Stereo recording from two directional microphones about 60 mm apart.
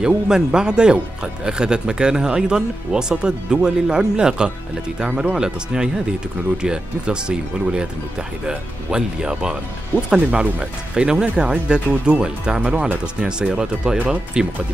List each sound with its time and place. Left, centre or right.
0.0 s a man's voice: centre